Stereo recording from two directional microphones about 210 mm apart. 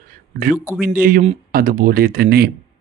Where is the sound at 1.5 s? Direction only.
40° right (ahead or behind).